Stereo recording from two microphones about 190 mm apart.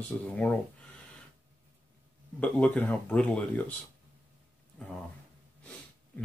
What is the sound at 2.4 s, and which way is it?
Speech, 5° left (ahead or behind).